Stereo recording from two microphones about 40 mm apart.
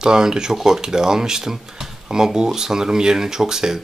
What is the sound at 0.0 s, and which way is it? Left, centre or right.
Speech, centre.